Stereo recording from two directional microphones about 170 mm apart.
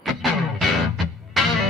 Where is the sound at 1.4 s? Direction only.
Centre (ahead or behind).